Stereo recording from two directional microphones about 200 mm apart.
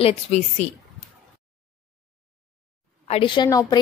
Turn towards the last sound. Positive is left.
turn(degrees=20)  # may be behind; listen again after turning